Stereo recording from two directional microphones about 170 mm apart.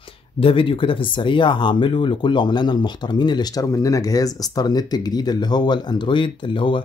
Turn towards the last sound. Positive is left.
turn(degrees=30)  # may be behind; listen again after turning